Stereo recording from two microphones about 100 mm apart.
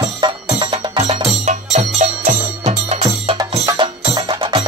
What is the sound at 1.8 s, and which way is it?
Music, 90° right.